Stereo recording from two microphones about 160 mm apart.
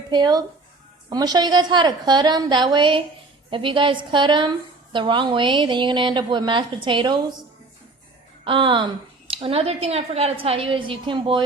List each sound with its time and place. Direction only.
0.1 s a woman's voice: 25° right (ahead or behind)
8.4 s a woman's voice: 30° right (ahead or behind)